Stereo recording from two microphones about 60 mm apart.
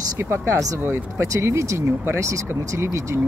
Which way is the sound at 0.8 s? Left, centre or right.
Right.